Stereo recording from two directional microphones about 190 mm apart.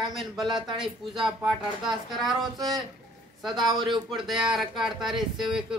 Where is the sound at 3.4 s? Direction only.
Centre (ahead or behind).